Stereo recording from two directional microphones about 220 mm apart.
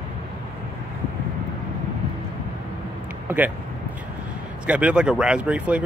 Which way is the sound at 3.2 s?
5° right (ahead or behind).